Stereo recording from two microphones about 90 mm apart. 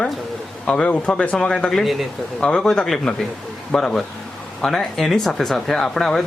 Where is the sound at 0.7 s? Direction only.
15° left (ahead or behind).